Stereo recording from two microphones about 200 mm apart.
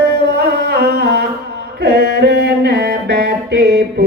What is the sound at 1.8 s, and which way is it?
Mantra, 55° right (ahead or behind).